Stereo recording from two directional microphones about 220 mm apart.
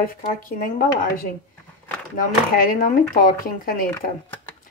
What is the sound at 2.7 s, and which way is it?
Speech, 40° left (ahead or behind).